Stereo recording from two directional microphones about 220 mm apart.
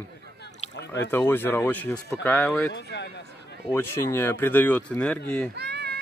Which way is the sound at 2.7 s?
50° left (ahead or behind).